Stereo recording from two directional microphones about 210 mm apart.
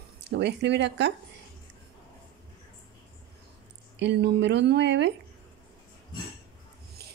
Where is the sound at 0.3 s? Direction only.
55° right (ahead or behind).